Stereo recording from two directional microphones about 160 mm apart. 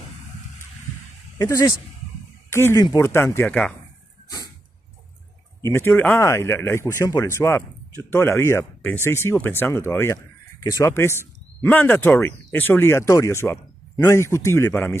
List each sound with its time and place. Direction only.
1.4 s speech: 20° left (ahead or behind)
5.6 s speech: 15° left (ahead or behind)